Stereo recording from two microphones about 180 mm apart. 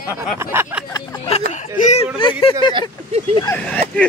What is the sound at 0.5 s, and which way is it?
Speech, 15° right (ahead or behind).